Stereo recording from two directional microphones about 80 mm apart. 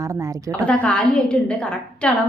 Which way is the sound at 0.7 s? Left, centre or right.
Centre.